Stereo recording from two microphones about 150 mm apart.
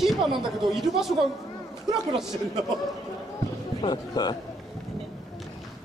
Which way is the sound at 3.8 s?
30° left (ahead or behind).